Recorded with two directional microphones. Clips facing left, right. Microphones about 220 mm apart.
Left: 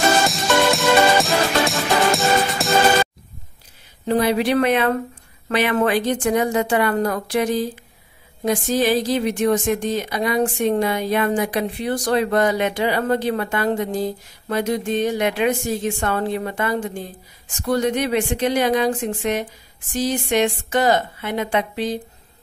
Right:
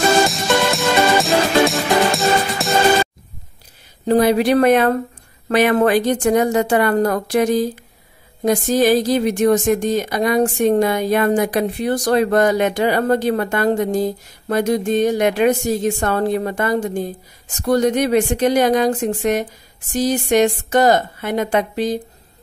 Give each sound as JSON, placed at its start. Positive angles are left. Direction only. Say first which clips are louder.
{"t": 0.3, "sound": "music", "louder": "even", "side_deg": 0}
{"t": 4.0, "sound": "speech", "louder": "right 4 dB", "side_deg": -40}